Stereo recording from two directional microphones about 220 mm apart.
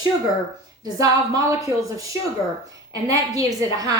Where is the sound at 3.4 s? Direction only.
15° right (ahead or behind).